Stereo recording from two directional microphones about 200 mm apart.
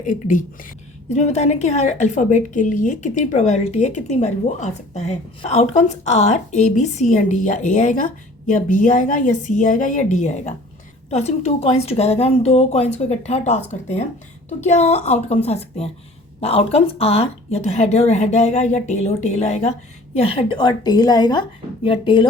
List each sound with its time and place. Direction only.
0.0 s a woman's voice: 40° left (ahead or behind)